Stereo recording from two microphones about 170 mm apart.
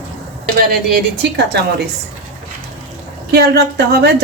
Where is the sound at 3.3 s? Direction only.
70° right (ahead or behind).